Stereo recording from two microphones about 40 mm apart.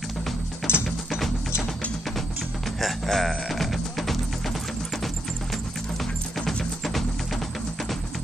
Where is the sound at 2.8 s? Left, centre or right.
Centre.